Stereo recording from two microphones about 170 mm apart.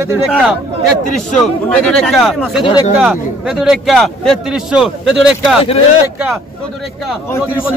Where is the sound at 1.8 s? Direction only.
5° left (ahead or behind).